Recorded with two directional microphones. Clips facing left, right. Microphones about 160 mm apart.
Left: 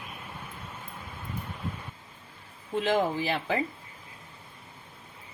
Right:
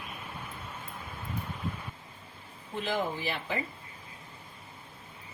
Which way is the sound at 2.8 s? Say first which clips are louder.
Left 5 dB; 90° left.